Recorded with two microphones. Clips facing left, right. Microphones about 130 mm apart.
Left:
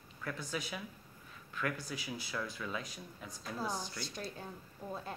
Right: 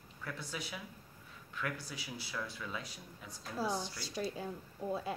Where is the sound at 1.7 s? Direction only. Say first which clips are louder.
Left 3 dB; 15° left (ahead or behind).